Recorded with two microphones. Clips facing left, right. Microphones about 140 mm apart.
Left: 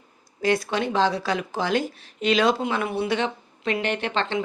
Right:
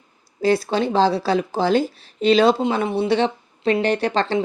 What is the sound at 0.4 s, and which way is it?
Speech, 30° right (ahead or behind).